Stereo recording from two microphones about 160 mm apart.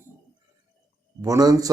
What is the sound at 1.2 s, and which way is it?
Speech, 20° right (ahead or behind).